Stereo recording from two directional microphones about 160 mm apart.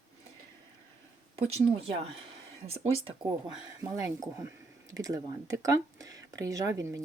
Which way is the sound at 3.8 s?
20° right (ahead or behind).